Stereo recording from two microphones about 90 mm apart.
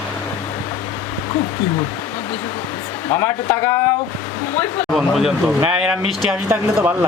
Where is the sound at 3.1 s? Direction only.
25° left (ahead or behind).